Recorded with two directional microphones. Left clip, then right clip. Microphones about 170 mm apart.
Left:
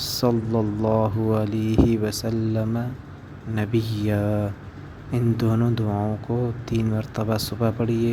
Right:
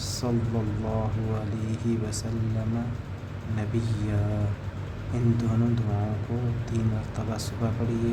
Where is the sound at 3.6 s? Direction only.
45° left (ahead or behind).